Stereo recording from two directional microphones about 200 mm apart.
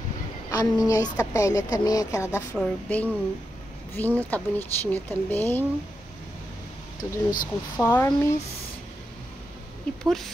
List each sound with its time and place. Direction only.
0.5 s a woman's voice: 20° left (ahead or behind)
7.0 s speech: 15° left (ahead or behind)
10.0 s a woman's voice: centre (ahead or behind)